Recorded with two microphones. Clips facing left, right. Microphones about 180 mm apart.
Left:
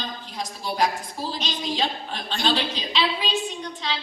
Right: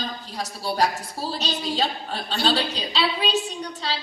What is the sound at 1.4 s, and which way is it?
A woman's voice, 35° right (ahead or behind).